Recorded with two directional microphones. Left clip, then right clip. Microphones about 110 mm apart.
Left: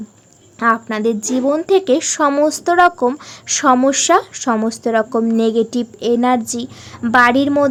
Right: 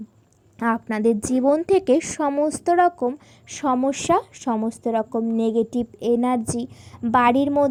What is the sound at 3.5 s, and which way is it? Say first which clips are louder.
Speech: left 10 dB; 15° right (ahead or behind).